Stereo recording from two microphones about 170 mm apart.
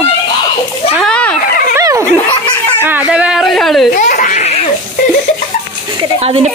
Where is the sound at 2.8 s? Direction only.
10° right (ahead or behind).